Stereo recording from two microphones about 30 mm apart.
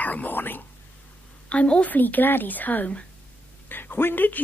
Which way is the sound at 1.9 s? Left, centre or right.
Left.